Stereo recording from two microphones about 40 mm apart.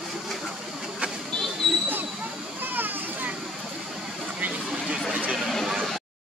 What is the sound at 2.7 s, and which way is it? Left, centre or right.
Children playing, right.